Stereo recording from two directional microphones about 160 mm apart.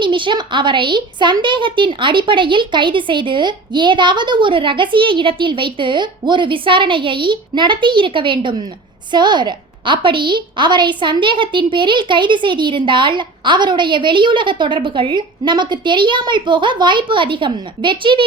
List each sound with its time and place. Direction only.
0.0 s a woman's voice: 30° right (ahead or behind)